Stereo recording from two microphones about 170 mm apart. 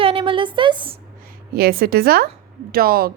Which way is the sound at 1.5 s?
60° right (ahead or behind).